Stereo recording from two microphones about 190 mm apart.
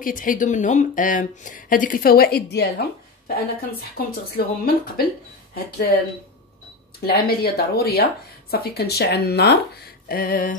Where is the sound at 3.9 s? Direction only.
55° left (ahead or behind).